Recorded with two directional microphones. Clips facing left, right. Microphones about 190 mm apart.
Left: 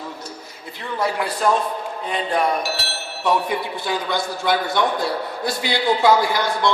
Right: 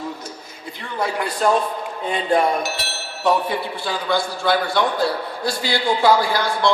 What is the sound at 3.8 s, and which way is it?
A man's voice, 20° left (ahead or behind).